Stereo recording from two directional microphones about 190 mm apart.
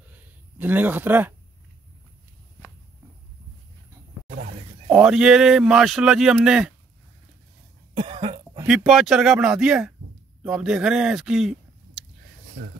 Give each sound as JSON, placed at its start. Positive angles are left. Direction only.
{"t": 0.6, "sound": "speech", "side_deg": -10}
{"t": 4.8, "sound": "speech", "side_deg": -5}
{"t": 7.9, "sound": "cough", "side_deg": -25}
{"t": 8.6, "sound": "speech", "side_deg": 0}